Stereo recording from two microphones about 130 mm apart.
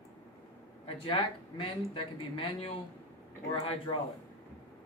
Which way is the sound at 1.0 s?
40° left (ahead or behind).